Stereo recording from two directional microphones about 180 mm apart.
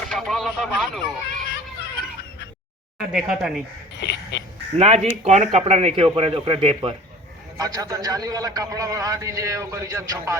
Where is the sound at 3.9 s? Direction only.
75° left (ahead or behind).